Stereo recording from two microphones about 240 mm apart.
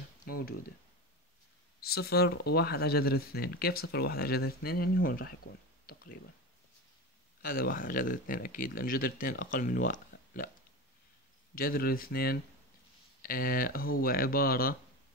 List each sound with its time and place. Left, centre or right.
0.3 s speech: left
1.8 s speech: left
7.4 s speech: left
11.5 s speech: left